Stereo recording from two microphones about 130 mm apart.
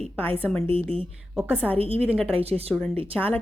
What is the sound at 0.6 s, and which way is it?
Speech, 45° right (ahead or behind).